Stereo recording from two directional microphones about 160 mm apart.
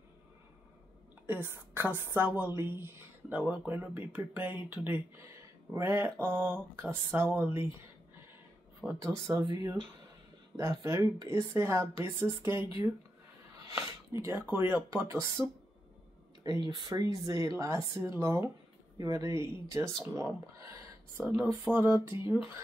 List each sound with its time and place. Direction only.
1.5 s speech: 15° right (ahead or behind)
8.8 s speech: 20° right (ahead or behind)
13.7 s speech: 20° right (ahead or behind)
16.4 s speech: 25° right (ahead or behind)